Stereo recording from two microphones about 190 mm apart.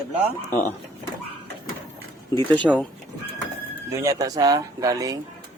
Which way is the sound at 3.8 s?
15° right (ahead or behind).